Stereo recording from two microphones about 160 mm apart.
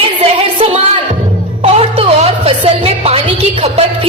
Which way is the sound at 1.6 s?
40° right (ahead or behind).